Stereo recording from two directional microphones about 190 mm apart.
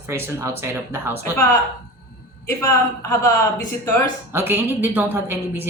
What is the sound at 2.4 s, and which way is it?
Speech, 15° left (ahead or behind).